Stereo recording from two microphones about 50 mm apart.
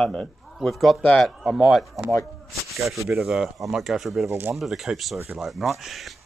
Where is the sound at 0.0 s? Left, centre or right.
Centre.